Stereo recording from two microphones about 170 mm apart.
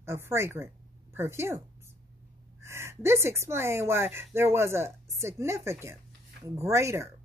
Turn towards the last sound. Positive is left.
turn(degrees=-15)  # may be behind; listen again after turning